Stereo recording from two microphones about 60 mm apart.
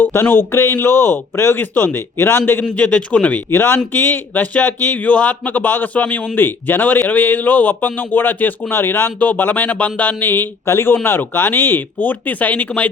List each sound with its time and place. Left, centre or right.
0.0 s a man's voice: left
2.6 s speech: left
3.5 s a man's voice: left